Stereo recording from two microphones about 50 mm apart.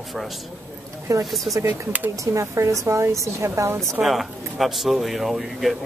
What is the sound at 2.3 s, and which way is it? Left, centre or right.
A woman's voice, right.